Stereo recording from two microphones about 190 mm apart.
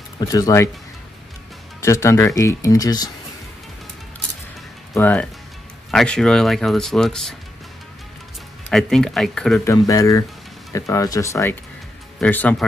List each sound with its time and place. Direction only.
0.2 s speech: 15° left (ahead or behind)
1.8 s speech: 15° left (ahead or behind)
4.9 s speech: 5° left (ahead or behind)
8.6 s speech: centre (ahead or behind)
9.7 s speech: 15° left (ahead or behind)